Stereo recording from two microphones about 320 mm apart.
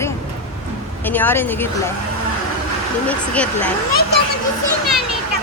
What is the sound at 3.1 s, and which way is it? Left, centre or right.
Speech, centre.